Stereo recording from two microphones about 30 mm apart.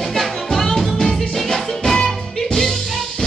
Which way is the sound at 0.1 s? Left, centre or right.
Centre.